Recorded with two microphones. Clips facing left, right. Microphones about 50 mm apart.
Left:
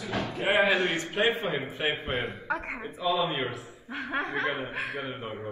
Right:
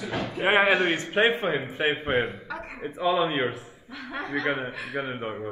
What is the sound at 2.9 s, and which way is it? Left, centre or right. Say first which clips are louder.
Speech: right 4 dB; right.